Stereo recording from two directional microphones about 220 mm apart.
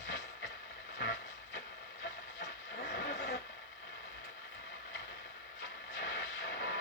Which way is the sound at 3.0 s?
50° left (ahead or behind).